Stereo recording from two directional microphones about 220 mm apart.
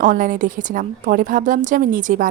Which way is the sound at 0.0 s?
35° right (ahead or behind).